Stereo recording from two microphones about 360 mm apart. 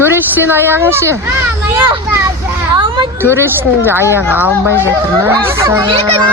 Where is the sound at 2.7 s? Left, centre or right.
Centre.